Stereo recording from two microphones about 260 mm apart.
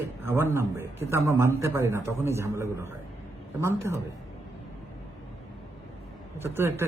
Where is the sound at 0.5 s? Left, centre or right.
Centre.